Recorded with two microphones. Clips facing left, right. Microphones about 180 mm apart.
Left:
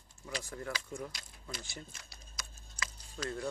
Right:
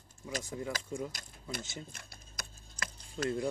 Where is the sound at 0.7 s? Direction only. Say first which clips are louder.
Right 2 dB; 45° right (ahead or behind).